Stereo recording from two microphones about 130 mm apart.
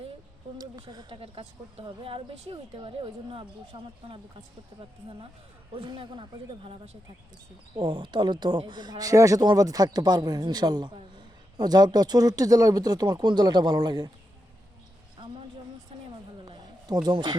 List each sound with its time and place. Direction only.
0.6 s a woman's voice: 30° right (ahead or behind)
1.2 s a woman's voice: 45° right (ahead or behind)
16.5 s a sound: 30° right (ahead or behind)